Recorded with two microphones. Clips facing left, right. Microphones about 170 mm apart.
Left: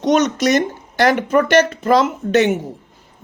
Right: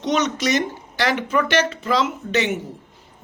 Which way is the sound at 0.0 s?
45° left (ahead or behind).